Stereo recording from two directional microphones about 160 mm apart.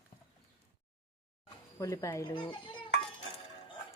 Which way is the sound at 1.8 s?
20° left (ahead or behind).